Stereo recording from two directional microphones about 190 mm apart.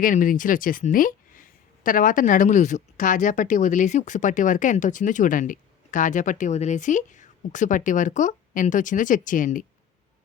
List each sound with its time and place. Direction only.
0.0 s speech: 45° left (ahead or behind)